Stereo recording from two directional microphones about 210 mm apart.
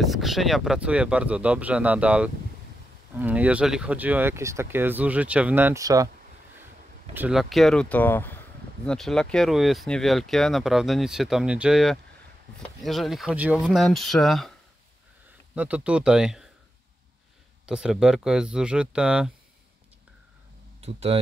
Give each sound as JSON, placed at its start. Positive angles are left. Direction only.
{"t": 0.0, "sound": "speech", "side_deg": 0}
{"t": 7.2, "sound": "speech", "side_deg": -5}
{"t": 15.5, "sound": "speech", "side_deg": -5}
{"t": 17.6, "sound": "speech", "side_deg": -5}
{"t": 20.8, "sound": "speech", "side_deg": -30}